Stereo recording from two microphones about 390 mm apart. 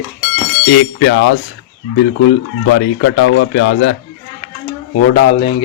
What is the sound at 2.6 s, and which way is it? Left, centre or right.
A man's voice, left.